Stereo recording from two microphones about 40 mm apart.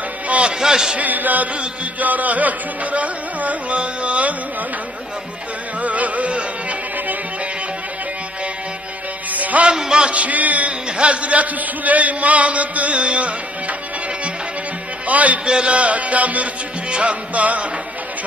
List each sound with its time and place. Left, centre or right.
0.3 s a sound: right
0.6 s a man's voice: centre
0.9 s a sound: right
2.0 s a man's voice: right
5.8 s music: right
9.3 s music: right
9.7 s music: right
10.1 s a man's voice: right
10.9 s a man's voice: right
15.0 s a man's voice: right
15.4 s a man's voice: right